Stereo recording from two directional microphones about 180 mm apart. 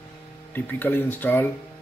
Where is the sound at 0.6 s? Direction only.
10° left (ahead or behind).